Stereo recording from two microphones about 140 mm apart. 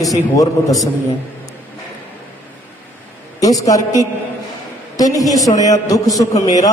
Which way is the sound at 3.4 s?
25° left (ahead or behind).